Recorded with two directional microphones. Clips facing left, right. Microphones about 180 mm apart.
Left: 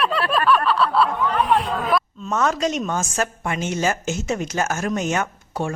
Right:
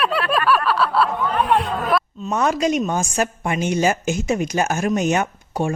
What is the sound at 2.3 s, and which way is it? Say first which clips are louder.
A woman's voice: right 2 dB; 15° right (ahead or behind).